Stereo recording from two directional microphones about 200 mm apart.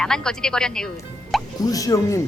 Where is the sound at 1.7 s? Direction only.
15° left (ahead or behind).